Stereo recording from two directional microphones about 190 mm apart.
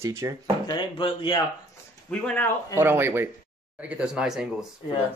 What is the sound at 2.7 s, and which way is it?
Speech, 10° right (ahead or behind).